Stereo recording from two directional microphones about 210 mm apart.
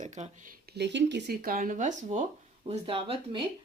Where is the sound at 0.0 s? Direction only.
35° right (ahead or behind).